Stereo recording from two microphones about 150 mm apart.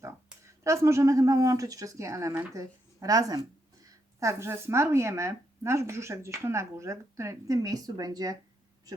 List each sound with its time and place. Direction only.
0.6 s speech: 20° right (ahead or behind)